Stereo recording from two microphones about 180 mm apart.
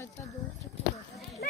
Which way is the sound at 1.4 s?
60° left (ahead or behind).